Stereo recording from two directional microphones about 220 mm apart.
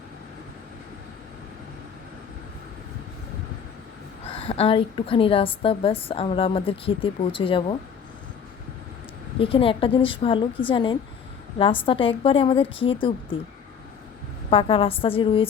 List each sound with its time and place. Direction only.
4.3 s a woman's voice: 25° left (ahead or behind)
9.4 s a woman's voice: 25° left (ahead or behind)
14.5 s a woman's voice: 25° left (ahead or behind)